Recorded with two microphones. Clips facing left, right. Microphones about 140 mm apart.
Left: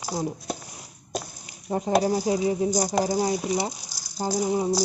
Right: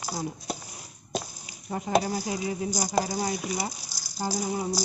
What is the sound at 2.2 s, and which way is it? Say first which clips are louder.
Speech: left 7 dB; 30° left (ahead or behind).